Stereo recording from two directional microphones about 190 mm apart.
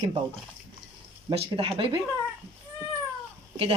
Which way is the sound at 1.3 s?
30° right (ahead or behind).